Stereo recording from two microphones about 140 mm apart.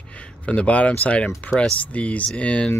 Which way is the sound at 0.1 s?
10° left (ahead or behind).